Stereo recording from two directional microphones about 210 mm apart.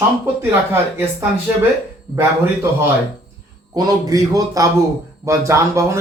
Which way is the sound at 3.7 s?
15° right (ahead or behind).